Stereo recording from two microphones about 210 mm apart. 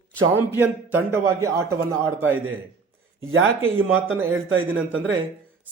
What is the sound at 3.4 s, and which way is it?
Speech, 70° right (ahead or behind).